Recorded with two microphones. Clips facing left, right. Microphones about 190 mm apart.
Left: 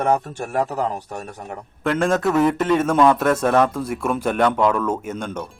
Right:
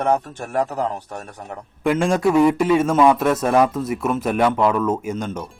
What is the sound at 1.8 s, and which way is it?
A man's voice, 10° right (ahead or behind).